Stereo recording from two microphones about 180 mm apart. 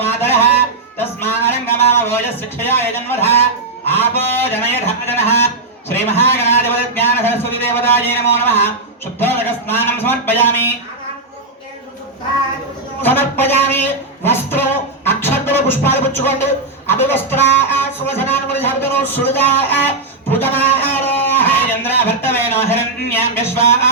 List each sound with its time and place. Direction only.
0.0 s music: 10° left (ahead or behind)
0.9 s a man's voice: 10° left (ahead or behind)
13.0 s a man's voice: 10° left (ahead or behind)
20.3 s a sound: 10° left (ahead or behind)